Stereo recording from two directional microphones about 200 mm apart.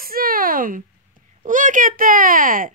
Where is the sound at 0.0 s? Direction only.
45° right (ahead or behind).